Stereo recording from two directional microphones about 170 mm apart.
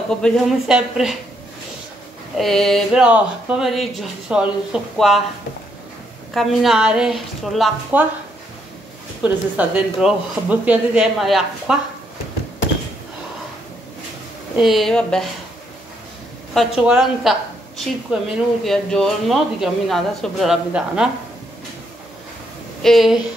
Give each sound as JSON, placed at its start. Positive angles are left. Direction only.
{"t": 0.2, "sound": "a woman's voice", "side_deg": -5}
{"t": 2.3, "sound": "a woman's voice", "side_deg": 0}
{"t": 6.3, "sound": "a woman's voice", "side_deg": 0}
{"t": 9.6, "sound": "a woman's voice", "side_deg": -5}
{"t": 14.6, "sound": "a woman's voice", "side_deg": 0}
{"t": 16.5, "sound": "a woman's voice", "side_deg": -5}
{"t": 22.8, "sound": "a woman's voice", "side_deg": 0}